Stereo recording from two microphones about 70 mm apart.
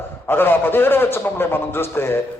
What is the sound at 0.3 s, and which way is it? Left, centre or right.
A man's voice, left.